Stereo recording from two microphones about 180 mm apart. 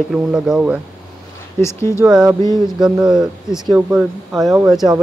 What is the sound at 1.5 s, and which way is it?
Speech, 15° left (ahead or behind).